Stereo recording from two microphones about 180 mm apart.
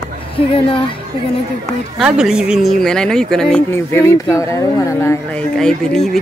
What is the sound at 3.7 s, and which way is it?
Speech, 15° left (ahead or behind).